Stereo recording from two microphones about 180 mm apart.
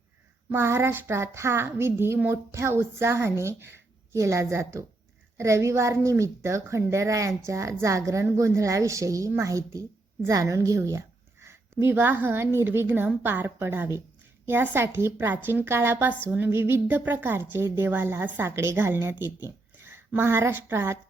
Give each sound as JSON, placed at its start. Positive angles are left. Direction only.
{"t": 0.5, "sound": "a woman's voice", "side_deg": -15}